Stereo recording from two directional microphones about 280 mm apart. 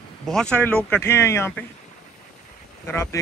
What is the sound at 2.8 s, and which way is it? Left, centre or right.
Speech, centre.